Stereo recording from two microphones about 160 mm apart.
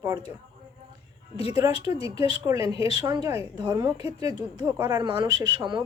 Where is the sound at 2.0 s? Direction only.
35° left (ahead or behind).